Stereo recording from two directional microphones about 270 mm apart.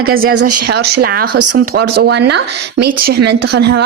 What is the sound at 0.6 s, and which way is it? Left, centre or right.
A woman's voice, right.